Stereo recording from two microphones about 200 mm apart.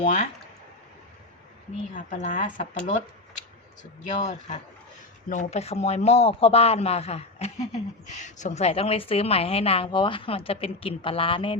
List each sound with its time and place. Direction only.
0.0 s speech: 35° left (ahead or behind)
1.9 s speech: 40° left (ahead or behind)
4.1 s speech: 35° left (ahead or behind)